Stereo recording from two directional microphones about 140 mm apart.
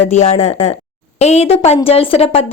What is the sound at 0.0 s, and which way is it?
A woman's voice, 50° left (ahead or behind).